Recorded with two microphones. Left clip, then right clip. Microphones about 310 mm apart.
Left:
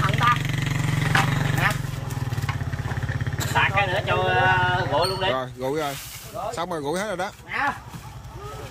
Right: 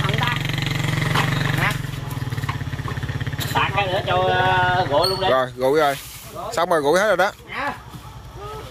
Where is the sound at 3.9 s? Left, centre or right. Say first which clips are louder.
Right 3 dB; centre.